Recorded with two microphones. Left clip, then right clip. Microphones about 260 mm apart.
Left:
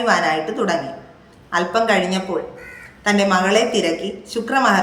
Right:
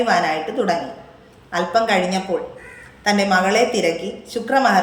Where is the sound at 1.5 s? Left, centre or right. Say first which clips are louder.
Left 1 dB; centre.